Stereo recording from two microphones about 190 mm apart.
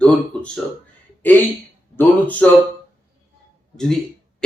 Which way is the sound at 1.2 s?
10° left (ahead or behind).